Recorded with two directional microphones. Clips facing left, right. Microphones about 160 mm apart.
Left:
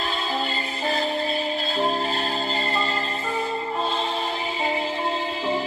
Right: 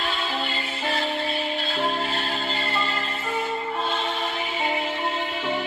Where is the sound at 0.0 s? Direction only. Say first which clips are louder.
Left 1 dB; 35° left (ahead or behind).